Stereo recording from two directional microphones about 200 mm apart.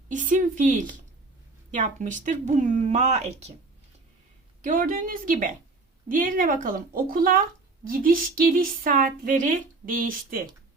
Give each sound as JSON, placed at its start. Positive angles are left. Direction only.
{"t": 0.1, "sound": "speech", "side_deg": -40}
{"t": 4.6, "sound": "a woman's voice", "side_deg": -45}